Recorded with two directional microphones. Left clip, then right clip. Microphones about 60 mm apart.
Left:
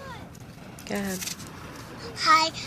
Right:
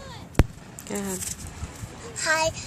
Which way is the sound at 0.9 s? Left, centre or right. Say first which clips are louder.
Left 1 dB; right.